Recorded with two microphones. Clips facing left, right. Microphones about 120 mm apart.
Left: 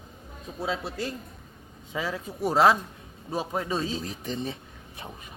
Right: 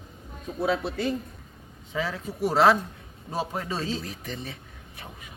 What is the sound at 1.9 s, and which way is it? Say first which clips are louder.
A man's voice: right 1 dB; 15° left (ahead or behind).